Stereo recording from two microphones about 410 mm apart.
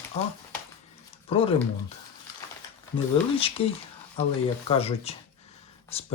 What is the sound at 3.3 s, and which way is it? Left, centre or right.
Speech, centre.